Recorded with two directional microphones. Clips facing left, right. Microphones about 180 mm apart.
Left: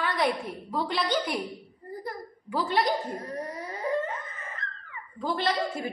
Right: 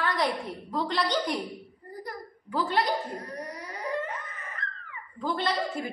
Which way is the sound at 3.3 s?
25° left (ahead or behind).